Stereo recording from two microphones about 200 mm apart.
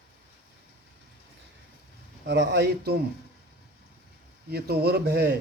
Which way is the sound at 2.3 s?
55° right (ahead or behind).